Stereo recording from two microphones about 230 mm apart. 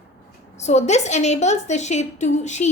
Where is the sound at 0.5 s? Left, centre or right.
Left.